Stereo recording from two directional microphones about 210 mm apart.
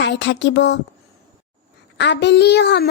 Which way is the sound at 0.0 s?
55° left (ahead or behind).